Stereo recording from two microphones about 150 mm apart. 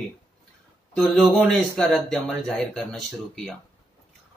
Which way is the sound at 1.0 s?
Centre (ahead or behind).